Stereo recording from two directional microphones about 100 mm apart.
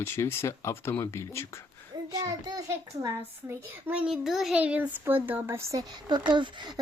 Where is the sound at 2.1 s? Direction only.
35° right (ahead or behind).